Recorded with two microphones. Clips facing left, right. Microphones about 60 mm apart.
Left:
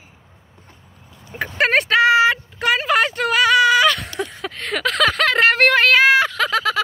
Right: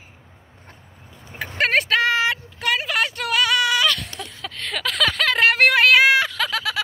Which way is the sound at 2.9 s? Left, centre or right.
Centre.